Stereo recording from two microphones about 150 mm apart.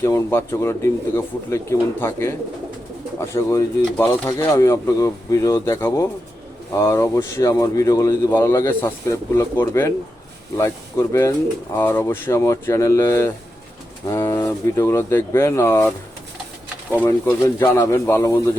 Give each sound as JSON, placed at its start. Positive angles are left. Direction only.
{"t": 0.0, "sound": "speech", "side_deg": 20}
{"t": 17.1, "sound": "speech", "side_deg": 25}